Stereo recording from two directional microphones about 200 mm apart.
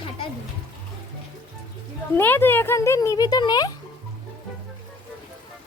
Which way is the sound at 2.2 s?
10° left (ahead or behind).